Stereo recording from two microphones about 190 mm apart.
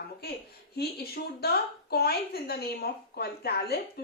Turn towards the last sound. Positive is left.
turn(degrees=55)  # may be behind; listen again after turning